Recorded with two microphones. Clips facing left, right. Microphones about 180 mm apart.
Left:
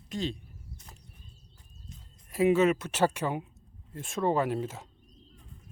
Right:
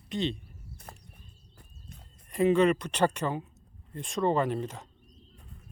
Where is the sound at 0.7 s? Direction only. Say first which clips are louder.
Right 5 dB; 60° right (ahead or behind).